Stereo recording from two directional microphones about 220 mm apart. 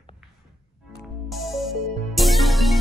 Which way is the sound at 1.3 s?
Centre (ahead or behind).